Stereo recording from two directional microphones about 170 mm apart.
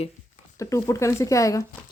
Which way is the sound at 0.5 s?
20° left (ahead or behind).